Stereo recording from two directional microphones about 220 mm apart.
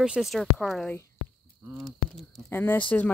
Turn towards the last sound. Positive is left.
turn(degrees=10)  # may be behind; listen again after turning